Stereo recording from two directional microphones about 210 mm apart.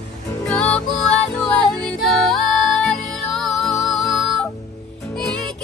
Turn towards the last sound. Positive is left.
turn(degrees=5)  # may be behind; listen again after turning